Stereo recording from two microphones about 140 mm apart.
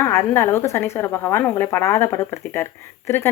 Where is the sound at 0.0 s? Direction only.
20° left (ahead or behind).